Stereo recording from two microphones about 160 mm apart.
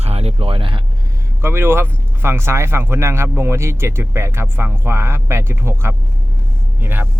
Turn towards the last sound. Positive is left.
turn(degrees=-15)  # may be behind; listen again after turning